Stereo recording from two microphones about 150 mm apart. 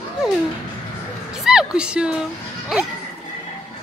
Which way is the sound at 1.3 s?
5° right (ahead or behind).